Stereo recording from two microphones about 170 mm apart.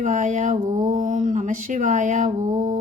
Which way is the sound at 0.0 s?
45° right (ahead or behind).